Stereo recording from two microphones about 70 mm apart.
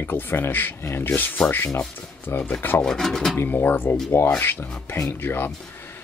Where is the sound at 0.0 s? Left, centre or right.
Left.